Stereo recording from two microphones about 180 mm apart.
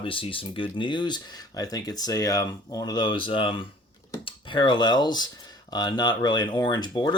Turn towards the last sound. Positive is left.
turn(degrees=25)  # may be behind; listen again after turning